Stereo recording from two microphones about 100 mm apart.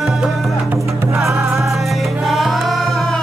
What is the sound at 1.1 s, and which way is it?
Music, 30° right (ahead or behind).